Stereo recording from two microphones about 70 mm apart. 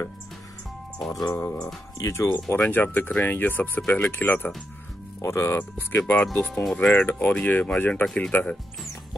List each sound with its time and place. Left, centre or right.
1.0 s speech: centre
1.3 s speech: left
2.0 s speech: left
2.7 s speech: left
5.2 s speech: left; by 7.0 s centre
7.0 s speech: left
7.9 s speech: centre